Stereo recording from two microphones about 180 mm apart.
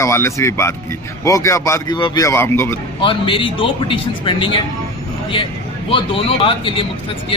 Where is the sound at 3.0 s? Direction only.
30° left (ahead or behind).